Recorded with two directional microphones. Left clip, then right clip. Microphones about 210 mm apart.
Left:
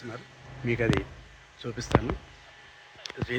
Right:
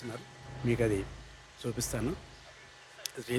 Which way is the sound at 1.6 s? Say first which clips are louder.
Left 1 dB; 15° right (ahead or behind).